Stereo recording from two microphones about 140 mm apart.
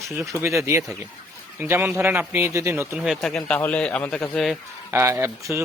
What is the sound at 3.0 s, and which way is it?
A man's voice, centre (ahead or behind).